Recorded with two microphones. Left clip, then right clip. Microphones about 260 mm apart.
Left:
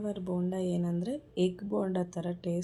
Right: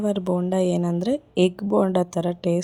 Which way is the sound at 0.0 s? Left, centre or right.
Right.